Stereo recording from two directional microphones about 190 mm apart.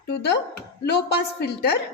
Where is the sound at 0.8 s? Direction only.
60° left (ahead or behind).